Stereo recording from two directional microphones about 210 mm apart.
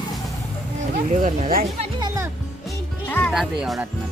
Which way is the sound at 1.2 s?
40° right (ahead or behind).